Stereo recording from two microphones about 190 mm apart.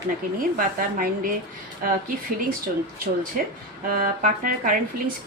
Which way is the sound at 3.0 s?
45° right (ahead or behind).